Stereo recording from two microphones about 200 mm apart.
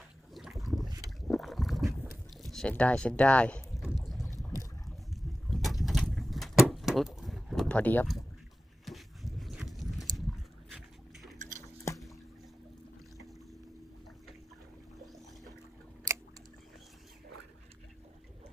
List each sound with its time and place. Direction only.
0.3 s boat: centre (ahead or behind)
2.4 s speech: centre (ahead or behind)
4.0 s boat: centre (ahead or behind)
5.5 s vehicle: centre (ahead or behind)
8.9 s livestock: centre (ahead or behind)
10.7 s dog: centre (ahead or behind)
11.3 s a sound: 40° right (ahead or behind)